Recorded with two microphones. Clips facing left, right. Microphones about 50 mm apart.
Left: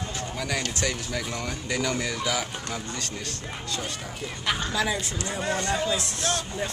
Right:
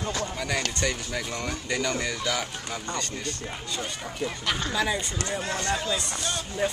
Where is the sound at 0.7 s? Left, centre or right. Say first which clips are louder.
Even; centre.